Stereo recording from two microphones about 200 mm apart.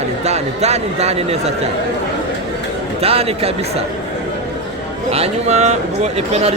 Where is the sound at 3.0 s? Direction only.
30° right (ahead or behind).